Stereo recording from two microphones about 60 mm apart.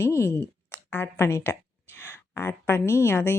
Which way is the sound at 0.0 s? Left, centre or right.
Left.